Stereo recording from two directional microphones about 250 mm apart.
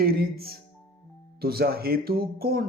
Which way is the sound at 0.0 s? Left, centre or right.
Right.